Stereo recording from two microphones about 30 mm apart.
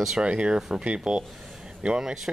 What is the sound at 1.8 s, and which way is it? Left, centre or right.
Speech, right.